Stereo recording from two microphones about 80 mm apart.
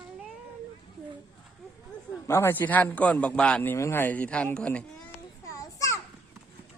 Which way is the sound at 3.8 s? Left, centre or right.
Left.